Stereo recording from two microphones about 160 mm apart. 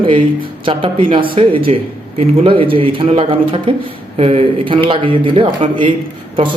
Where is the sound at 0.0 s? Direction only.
30° right (ahead or behind).